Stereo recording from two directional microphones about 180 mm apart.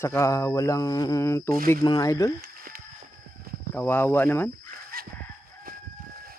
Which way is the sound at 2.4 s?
55° right (ahead or behind).